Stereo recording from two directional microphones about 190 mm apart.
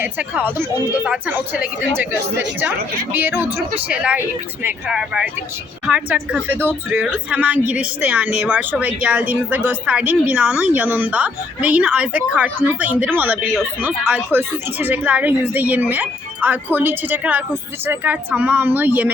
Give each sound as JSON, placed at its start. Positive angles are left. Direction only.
{"t": 0.0, "sound": "a woman's voice", "side_deg": -10}